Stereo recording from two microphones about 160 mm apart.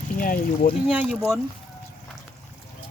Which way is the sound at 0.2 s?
60° left (ahead or behind).